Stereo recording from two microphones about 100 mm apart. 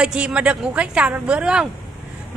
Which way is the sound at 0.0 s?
10° right (ahead or behind).